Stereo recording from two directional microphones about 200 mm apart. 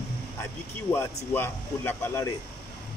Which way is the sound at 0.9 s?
10° left (ahead or behind).